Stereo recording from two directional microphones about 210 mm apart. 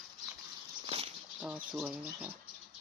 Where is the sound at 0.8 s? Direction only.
30° right (ahead or behind).